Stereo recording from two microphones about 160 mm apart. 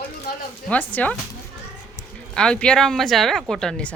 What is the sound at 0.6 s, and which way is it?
Speech, 10° left (ahead or behind).